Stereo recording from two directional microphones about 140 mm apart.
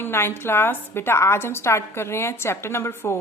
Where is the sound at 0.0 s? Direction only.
15° left (ahead or behind).